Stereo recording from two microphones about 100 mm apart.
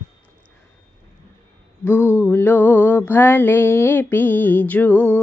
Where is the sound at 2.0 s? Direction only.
20° right (ahead or behind).